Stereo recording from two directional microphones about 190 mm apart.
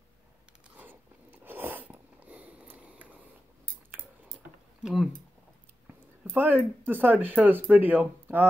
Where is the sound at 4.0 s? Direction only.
10° right (ahead or behind).